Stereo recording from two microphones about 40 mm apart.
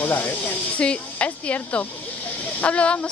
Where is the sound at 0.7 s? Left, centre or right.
Left.